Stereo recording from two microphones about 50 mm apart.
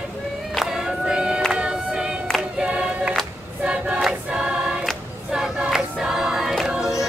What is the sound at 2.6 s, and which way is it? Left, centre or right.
Choir, centre.